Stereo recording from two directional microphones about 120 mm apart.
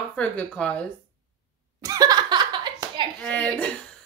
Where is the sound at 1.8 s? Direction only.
30° right (ahead or behind).